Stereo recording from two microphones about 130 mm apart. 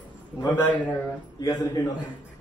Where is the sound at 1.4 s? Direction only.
30° left (ahead or behind).